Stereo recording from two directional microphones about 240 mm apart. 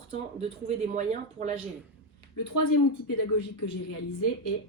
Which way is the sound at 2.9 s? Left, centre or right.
Left.